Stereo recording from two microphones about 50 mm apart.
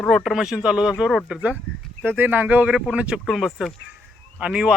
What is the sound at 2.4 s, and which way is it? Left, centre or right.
Speech, right.